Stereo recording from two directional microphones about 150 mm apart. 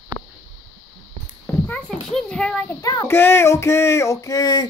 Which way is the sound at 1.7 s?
5° left (ahead or behind).